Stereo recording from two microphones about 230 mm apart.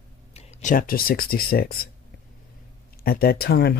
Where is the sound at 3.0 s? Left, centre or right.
Left.